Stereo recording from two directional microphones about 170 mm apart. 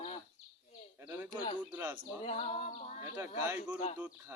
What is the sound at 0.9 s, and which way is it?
A man's voice, 15° right (ahead or behind).